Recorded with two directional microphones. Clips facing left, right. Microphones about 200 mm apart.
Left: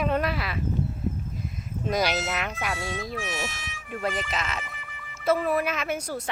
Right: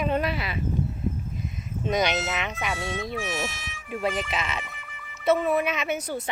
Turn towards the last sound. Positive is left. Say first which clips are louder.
# right 1 dB
turn(degrees=0)  # may be behind; listen again after turning